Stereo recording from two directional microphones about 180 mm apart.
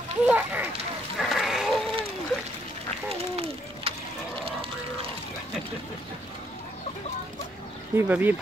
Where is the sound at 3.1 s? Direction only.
35° right (ahead or behind).